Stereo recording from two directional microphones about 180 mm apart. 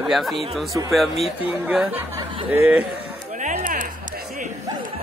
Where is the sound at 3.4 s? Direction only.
45° right (ahead or behind).